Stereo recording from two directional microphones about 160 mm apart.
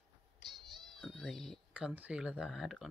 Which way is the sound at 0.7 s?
Centre (ahead or behind).